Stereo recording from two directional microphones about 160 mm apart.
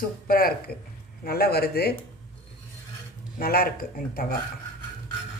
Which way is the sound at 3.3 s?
65° left (ahead or behind).